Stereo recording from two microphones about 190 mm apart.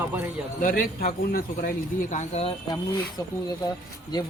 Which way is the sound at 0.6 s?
50° left (ahead or behind).